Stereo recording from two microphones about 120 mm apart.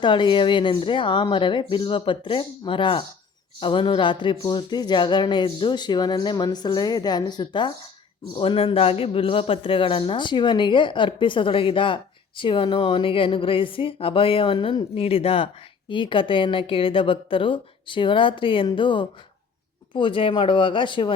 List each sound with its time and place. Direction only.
0.0 s a man's voice: 40° left (ahead or behind)
8.4 s a man's voice: 50° left (ahead or behind)
15.9 s a man's voice: 45° left (ahead or behind)